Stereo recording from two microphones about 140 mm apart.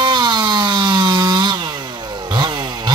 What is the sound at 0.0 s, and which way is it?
Chainsaw, 30° right (ahead or behind).